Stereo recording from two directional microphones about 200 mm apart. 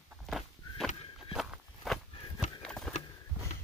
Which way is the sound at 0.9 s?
25° left (ahead or behind).